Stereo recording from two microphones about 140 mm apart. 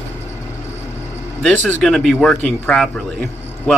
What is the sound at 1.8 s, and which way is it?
A man's voice, 5° left (ahead or behind).